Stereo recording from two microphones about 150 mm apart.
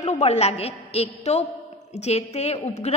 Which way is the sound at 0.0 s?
50° left (ahead or behind).